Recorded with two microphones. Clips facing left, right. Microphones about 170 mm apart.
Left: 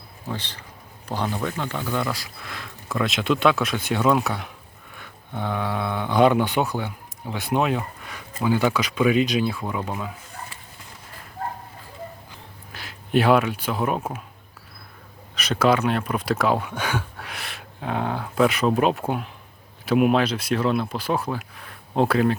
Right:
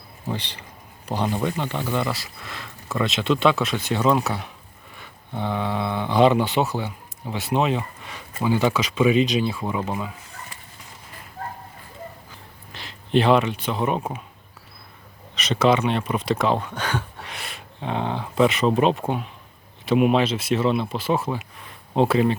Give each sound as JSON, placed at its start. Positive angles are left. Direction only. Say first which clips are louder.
{"t": 1.0, "sound": "speech", "louder": "right 2 dB", "side_deg": -10}
{"t": 1.5, "sound": "speech", "louder": "right 1 dB", "side_deg": 0}
{"t": 5.5, "sound": "speech", "louder": "right 1 dB", "side_deg": 0}
{"t": 12.7, "sound": "speech", "louder": "right 1 dB", "side_deg": 5}
{"t": 15.4, "sound": "speech", "louder": "right 1 dB", "side_deg": 0}